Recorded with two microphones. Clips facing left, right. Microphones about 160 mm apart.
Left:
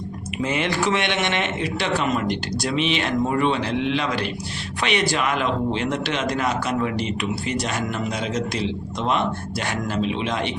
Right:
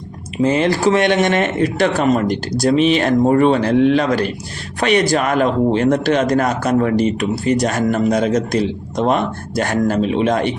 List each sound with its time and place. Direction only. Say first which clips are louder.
0.4 s speech: right 8 dB; 35° right (ahead or behind)